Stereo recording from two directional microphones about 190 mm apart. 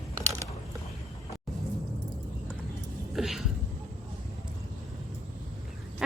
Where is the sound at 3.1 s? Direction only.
Centre (ahead or behind).